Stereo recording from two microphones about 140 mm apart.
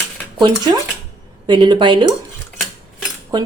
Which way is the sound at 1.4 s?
35° right (ahead or behind).